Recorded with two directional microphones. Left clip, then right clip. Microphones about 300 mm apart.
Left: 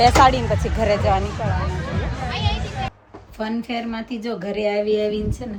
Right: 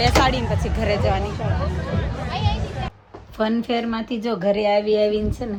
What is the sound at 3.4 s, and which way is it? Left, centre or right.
A woman's voice, centre.